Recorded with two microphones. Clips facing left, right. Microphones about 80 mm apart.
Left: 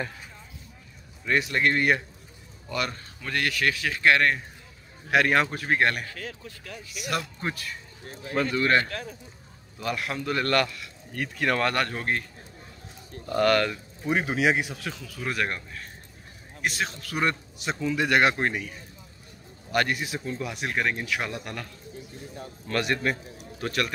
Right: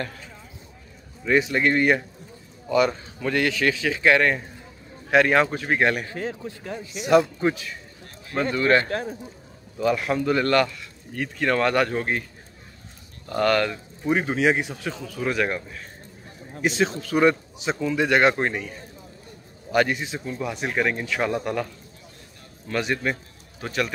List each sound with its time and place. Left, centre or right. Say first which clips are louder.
1.2 s speech: right 4 dB; centre
6.0 s speech: right 8 dB; right
7.2 s speech: right 14 dB; centre
8.8 s speech: right 8 dB; right
9.8 s speech: right 8 dB; centre
13.3 s speech: right 1 dB; centre
19.7 s speech: right 4 dB; centre
22.7 s speech: right 1 dB; centre